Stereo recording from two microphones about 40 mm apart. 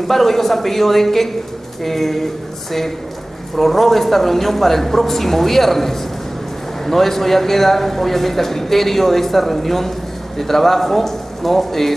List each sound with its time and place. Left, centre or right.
0.1 s a man's voice: centre
3.5 s a man's voice: centre